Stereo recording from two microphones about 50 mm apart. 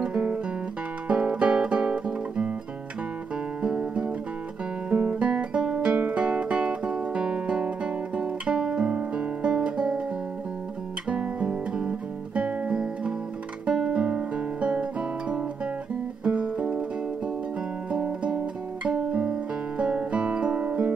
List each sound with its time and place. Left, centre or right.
0.0 s guitar: right
3.6 s music: centre
4.8 s guitar: right
5.3 s guitar: centre
11.1 s guitar: right
16.3 s music: right
18.0 s guitar: right